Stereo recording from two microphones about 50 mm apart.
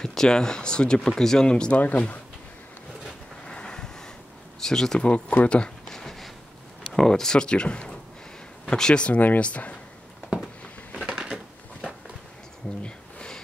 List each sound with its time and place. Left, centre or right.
0.0 s speech: centre
1.8 s speech: left
3.4 s vehicle: centre
4.6 s speech: centre
5.3 s speech: left
5.9 s a sound: centre
6.9 s speech: centre; by 9.8 s left
11.1 s a sound: centre
12.8 s a sound: centre